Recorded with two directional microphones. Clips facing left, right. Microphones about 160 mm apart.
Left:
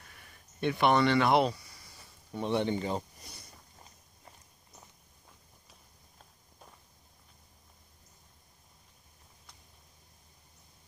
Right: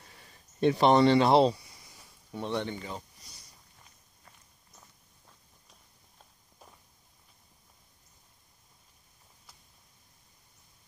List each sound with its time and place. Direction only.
0.1 s speech: 30° right (ahead or behind)
2.3 s speech: 5° left (ahead or behind)
2.6 s speech: 25° left (ahead or behind)
3.2 s a sound: 60° left (ahead or behind)